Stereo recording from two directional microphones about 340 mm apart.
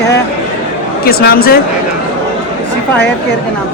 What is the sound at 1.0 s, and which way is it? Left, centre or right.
Speech, left.